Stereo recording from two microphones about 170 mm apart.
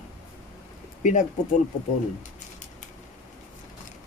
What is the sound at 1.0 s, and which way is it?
Speech, 45° left (ahead or behind).